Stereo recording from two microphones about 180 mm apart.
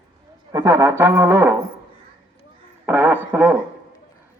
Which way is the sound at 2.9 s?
10° right (ahead or behind).